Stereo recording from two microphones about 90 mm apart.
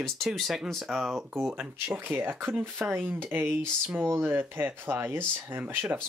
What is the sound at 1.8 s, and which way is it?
Speech, 25° right (ahead or behind).